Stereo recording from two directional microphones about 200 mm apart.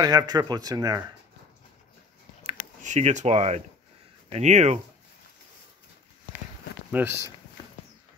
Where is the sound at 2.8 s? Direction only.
35° right (ahead or behind).